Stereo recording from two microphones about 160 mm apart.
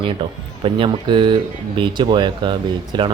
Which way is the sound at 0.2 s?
35° right (ahead or behind).